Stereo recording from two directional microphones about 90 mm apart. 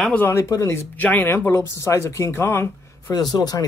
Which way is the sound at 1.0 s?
20° left (ahead or behind).